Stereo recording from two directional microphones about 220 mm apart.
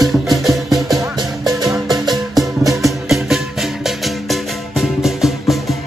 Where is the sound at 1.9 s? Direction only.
20° right (ahead or behind).